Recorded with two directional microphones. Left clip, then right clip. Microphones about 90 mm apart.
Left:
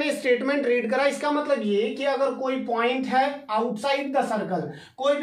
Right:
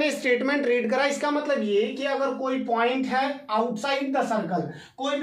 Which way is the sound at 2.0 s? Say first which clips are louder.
Left 2 dB; 15° right (ahead or behind).